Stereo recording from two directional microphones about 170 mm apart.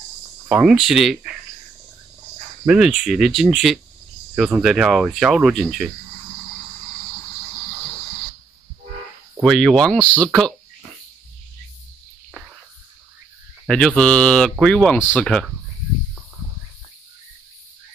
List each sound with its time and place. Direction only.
0.5 s speech: 5° right (ahead or behind)
2.6 s speech: 5° right (ahead or behind)
9.4 s speech: centre (ahead or behind)
13.7 s speech: 5° left (ahead or behind)